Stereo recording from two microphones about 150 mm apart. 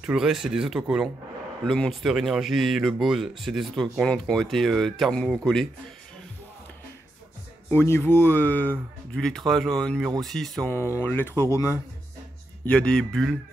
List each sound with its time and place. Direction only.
0.0 s speech: 5° right (ahead or behind)
7.7 s speech: 15° left (ahead or behind)
10.7 s speech: 15° left (ahead or behind)
12.6 s speech: 5° left (ahead or behind)